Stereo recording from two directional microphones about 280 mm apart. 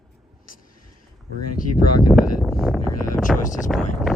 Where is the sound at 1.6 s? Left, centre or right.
Left.